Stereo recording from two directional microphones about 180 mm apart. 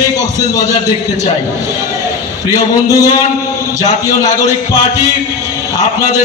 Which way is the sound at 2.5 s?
20° left (ahead or behind).